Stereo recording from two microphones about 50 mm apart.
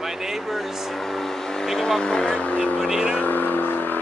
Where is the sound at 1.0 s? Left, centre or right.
Centre.